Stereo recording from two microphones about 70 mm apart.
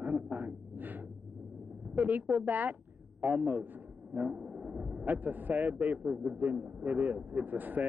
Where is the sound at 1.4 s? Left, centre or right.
Centre.